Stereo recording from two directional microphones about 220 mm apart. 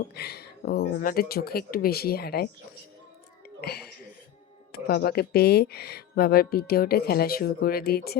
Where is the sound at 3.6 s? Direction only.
45° left (ahead or behind).